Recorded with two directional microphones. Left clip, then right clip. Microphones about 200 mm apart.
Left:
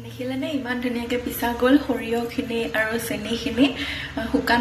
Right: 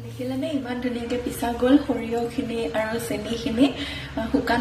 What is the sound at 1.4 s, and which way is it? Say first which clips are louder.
Speech: left 1 dB; centre (ahead or behind).